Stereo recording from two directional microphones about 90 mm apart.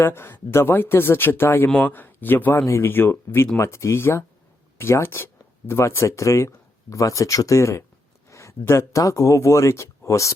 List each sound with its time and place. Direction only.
0.0 s speech: 25° left (ahead or behind)